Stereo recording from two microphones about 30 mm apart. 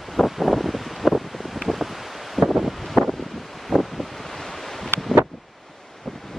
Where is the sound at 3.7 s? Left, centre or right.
Right.